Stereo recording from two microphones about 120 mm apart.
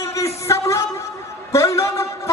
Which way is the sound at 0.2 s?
25° left (ahead or behind).